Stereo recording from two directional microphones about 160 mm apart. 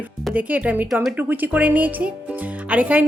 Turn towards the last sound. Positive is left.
turn(degrees=-10)  # may be behind; listen again after turning